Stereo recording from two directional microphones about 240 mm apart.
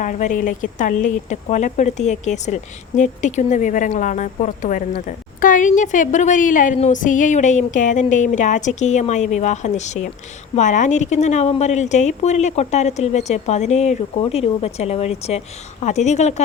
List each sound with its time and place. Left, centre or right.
0.0 s speech: left